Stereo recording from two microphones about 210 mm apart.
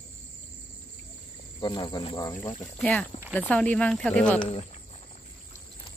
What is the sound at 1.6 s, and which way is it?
Cricket, 20° left (ahead or behind).